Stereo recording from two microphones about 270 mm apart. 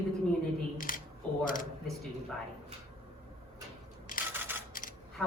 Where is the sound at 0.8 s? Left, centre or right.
Left.